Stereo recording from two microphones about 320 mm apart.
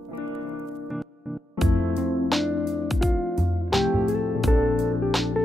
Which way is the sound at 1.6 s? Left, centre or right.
Centre.